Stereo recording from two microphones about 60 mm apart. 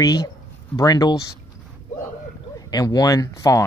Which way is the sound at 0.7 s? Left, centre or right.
Left.